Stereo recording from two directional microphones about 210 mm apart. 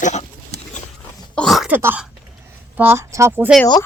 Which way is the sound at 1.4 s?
Centre (ahead or behind).